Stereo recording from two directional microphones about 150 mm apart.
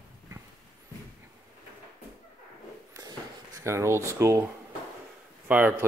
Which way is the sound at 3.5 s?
20° right (ahead or behind).